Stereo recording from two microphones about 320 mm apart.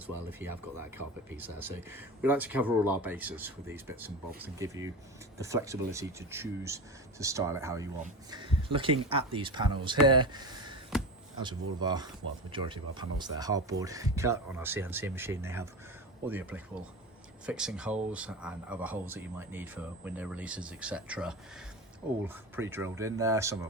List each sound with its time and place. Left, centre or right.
0.3 s speech: centre